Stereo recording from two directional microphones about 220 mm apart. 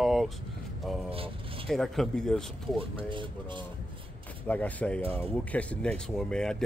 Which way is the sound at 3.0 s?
20° right (ahead or behind).